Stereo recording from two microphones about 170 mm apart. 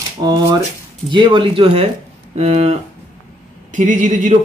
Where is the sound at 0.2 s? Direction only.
25° right (ahead or behind).